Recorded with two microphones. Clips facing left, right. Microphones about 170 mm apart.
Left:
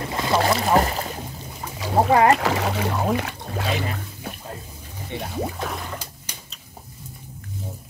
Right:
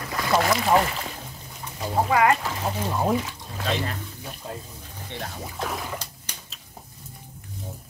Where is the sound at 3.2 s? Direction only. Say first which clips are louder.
Left 3 dB; 65° left (ahead or behind).